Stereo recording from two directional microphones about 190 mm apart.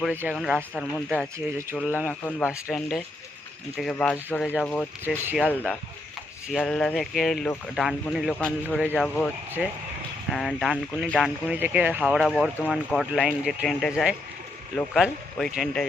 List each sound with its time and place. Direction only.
0.0 s speech: 10° right (ahead or behind)
0.7 s speech: 5° left (ahead or behind)
2.5 s speech: 5° right (ahead or behind)
5.0 s speech: 10° right (ahead or behind)